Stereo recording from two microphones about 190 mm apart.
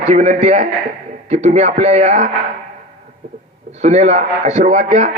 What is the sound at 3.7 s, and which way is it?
A man's voice, 35° right (ahead or behind).